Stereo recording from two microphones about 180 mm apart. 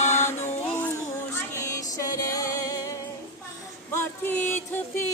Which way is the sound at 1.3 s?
15° left (ahead or behind).